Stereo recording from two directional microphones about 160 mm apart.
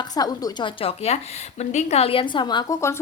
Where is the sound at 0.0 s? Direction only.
25° left (ahead or behind).